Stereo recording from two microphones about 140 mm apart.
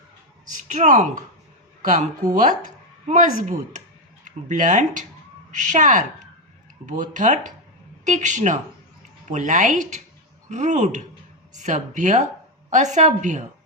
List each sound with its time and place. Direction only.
0.4 s speech: 65° right (ahead or behind)